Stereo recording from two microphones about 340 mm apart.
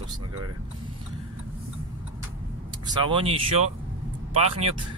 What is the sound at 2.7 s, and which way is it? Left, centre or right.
A man's voice, centre.